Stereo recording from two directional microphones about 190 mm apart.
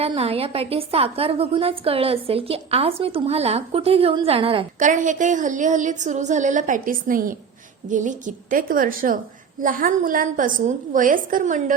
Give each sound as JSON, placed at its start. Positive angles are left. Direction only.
{"t": 0.0, "sound": "a woman's voice", "side_deg": -30}
{"t": 4.8, "sound": "a woman's voice", "side_deg": -40}